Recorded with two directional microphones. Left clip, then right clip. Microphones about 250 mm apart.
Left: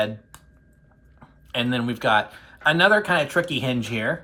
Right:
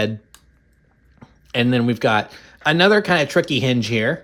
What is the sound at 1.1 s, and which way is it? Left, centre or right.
A man's voice, right.